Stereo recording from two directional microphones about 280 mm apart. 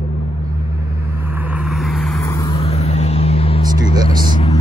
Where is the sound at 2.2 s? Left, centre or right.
Centre.